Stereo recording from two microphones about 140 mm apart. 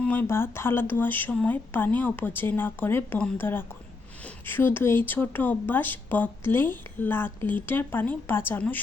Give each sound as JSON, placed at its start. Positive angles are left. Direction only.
{"t": 0.0, "sound": "speech", "side_deg": 15}